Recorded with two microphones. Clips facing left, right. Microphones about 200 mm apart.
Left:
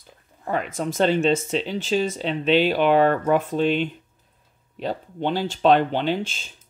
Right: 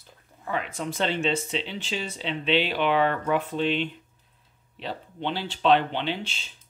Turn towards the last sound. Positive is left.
turn(degrees=45)  # may be behind; listen again after turning